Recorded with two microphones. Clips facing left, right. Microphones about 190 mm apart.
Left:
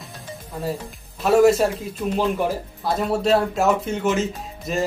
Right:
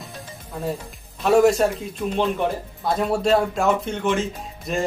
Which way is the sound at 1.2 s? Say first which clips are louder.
Left 1 dB; centre (ahead or behind).